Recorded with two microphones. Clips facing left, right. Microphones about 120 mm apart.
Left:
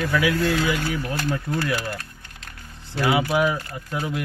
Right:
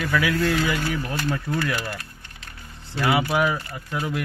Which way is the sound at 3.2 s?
15° left (ahead or behind).